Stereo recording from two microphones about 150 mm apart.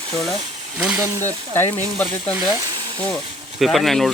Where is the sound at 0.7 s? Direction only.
5° right (ahead or behind).